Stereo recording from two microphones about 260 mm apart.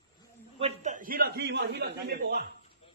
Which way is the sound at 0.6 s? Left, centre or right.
Right.